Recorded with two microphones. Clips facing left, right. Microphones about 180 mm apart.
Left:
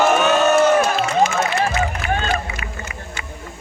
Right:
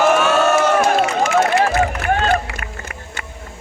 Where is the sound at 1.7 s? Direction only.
50° right (ahead or behind).